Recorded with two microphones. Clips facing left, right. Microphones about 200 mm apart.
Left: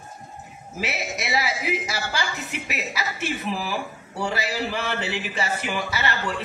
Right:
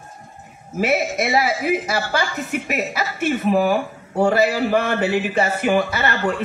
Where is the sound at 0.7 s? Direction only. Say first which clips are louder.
Right 10 dB; 50° right (ahead or behind).